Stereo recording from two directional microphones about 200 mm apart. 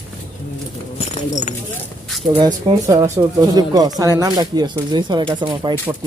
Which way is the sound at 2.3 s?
20° right (ahead or behind).